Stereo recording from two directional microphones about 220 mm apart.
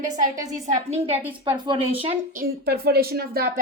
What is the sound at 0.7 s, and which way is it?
Speech, 30° right (ahead or behind).